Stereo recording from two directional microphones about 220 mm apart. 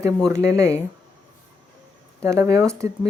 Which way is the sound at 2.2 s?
15° right (ahead or behind).